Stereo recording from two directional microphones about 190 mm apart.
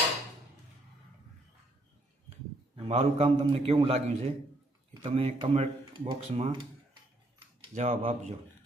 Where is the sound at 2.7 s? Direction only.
30° right (ahead or behind).